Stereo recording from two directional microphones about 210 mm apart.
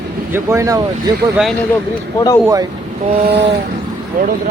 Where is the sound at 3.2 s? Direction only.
50° right (ahead or behind).